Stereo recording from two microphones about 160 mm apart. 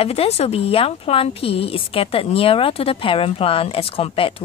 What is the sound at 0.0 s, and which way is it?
A woman's voice, 40° left (ahead or behind).